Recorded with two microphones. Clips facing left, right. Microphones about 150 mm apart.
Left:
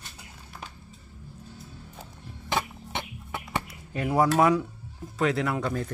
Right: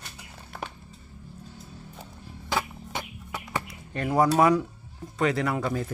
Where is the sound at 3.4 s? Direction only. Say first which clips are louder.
Even; 5° left (ahead or behind).